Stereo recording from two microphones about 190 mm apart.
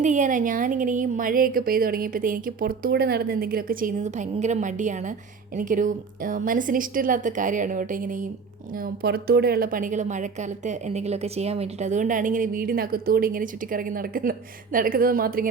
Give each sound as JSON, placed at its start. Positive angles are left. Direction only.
{"t": 0.0, "sound": "speech", "side_deg": -40}